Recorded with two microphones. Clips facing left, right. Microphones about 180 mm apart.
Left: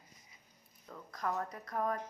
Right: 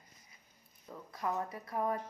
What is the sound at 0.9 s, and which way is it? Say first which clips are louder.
A woman's voice: right 1 dB; 5° right (ahead or behind).